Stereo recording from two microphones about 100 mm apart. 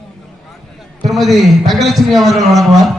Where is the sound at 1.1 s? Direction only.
Centre (ahead or behind).